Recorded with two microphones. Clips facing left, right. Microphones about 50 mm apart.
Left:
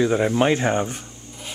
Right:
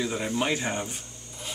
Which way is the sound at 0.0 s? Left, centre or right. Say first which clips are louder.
Left 9 dB; left.